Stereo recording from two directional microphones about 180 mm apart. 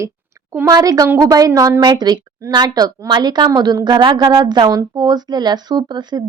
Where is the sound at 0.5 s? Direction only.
15° right (ahead or behind).